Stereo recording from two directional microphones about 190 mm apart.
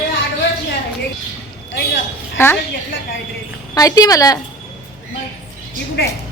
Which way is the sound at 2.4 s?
10° left (ahead or behind).